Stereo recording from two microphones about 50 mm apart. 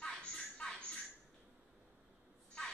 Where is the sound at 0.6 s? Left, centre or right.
Centre.